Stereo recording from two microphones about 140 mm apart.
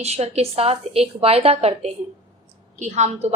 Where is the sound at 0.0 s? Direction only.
50° right (ahead or behind).